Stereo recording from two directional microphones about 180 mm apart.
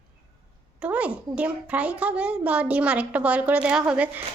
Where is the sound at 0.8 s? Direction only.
5° right (ahead or behind).